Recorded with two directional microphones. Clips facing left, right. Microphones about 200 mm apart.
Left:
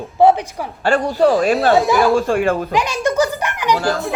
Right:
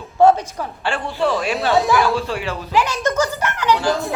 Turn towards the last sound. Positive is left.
turn(degrees=15)  # may be behind; listen again after turning